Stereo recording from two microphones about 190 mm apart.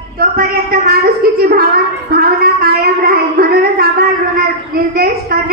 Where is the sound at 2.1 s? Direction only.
55° right (ahead or behind).